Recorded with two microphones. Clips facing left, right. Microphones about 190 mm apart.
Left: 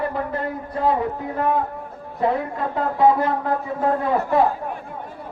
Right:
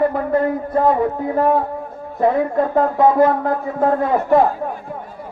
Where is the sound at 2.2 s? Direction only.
45° right (ahead or behind).